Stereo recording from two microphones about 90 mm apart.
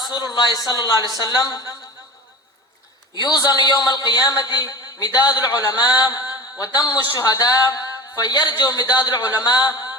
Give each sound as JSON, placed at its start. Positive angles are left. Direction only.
{"t": 0.0, "sound": "a man's voice", "side_deg": 50}
{"t": 3.2, "sound": "a man's voice", "side_deg": 45}